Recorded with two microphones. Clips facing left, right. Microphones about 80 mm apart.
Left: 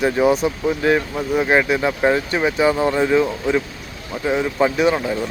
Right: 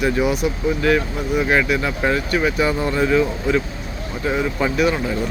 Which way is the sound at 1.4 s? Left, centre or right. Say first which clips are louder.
Left 2 dB; left.